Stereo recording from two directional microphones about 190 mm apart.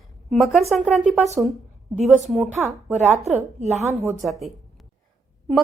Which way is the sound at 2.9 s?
35° right (ahead or behind).